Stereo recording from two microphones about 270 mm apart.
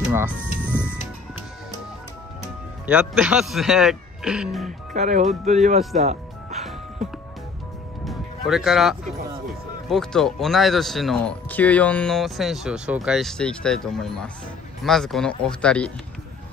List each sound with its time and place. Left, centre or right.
0.0 s music: centre
0.6 s music: centre
2.9 s speech: centre
4.6 s speech: right
5.8 s speech: centre
8.0 s music: centre
9.8 s speech: centre